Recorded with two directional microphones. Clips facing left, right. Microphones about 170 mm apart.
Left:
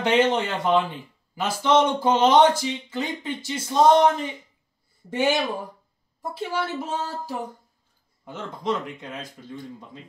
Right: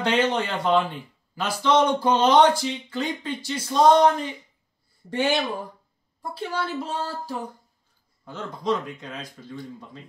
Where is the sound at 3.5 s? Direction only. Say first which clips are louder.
Even; 20° left (ahead or behind).